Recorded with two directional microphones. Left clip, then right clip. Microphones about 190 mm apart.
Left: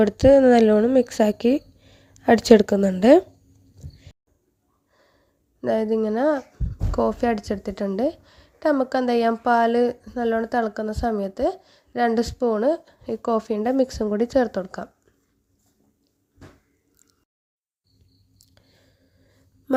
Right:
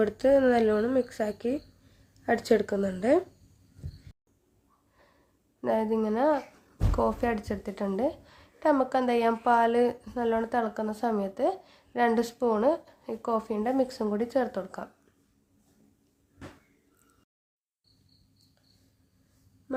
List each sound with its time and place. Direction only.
0.0 s speech: 40° left (ahead or behind)
5.6 s a woman's voice: 30° left (ahead or behind)